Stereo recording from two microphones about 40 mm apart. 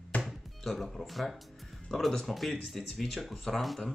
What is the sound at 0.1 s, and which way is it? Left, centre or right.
Music, left.